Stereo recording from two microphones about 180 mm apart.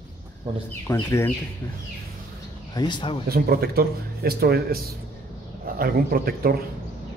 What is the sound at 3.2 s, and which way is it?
Speech, 55° right (ahead or behind).